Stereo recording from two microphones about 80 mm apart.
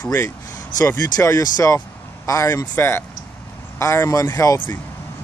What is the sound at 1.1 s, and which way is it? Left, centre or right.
Speech, left.